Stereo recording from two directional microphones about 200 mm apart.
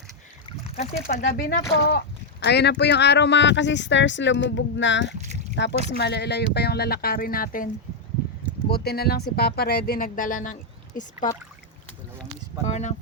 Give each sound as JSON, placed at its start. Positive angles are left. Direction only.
{"t": 1.2, "sound": "speech", "side_deg": 45}
{"t": 5.1, "sound": "speech", "side_deg": -35}
{"t": 6.0, "sound": "speech", "side_deg": 55}
{"t": 12.6, "sound": "speech", "side_deg": 35}